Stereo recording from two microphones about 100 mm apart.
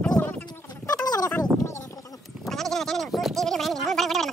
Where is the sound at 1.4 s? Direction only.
30° left (ahead or behind).